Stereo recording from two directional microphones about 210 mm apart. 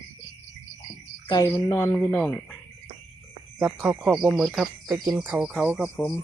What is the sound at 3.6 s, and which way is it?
Speech, 5° right (ahead or behind).